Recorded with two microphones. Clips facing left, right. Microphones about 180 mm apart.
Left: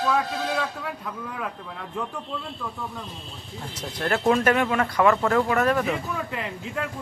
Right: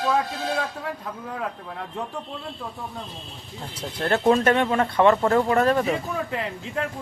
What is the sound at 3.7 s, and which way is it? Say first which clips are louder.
Speech: right 2 dB; 30° right (ahead or behind).